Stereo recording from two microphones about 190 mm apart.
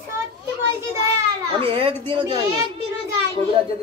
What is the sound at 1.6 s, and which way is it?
Speech, 30° right (ahead or behind).